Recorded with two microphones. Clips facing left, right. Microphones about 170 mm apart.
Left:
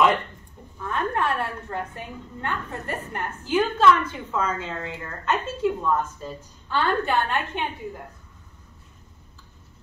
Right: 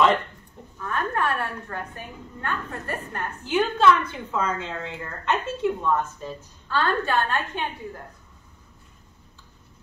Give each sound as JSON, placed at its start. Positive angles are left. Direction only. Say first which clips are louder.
{"t": 0.8, "sound": "a woman's voice", "louder": "left 1 dB", "side_deg": 20}
{"t": 6.7, "sound": "a woman's voice", "louder": "left 1 dB", "side_deg": 15}